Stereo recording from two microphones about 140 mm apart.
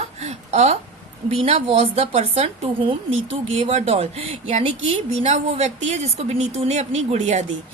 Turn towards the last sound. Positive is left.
turn(degrees=-55)  # may be behind; listen again after turning